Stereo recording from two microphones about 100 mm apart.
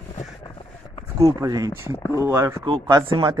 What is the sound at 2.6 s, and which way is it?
Speech, 50° right (ahead or behind).